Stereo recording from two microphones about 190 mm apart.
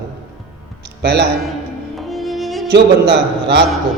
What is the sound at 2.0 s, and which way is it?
Music, centre (ahead or behind).